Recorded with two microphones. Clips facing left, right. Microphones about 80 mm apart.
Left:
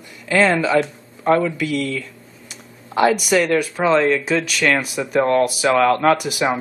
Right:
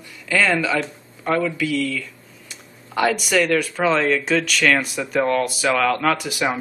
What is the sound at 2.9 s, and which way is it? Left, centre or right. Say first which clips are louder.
A woman's voice: left 4 dB; centre.